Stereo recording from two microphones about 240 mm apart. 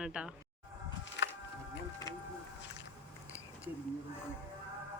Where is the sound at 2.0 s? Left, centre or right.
Centre.